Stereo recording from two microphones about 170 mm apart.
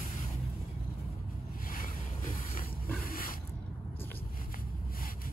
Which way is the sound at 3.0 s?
55° left (ahead or behind).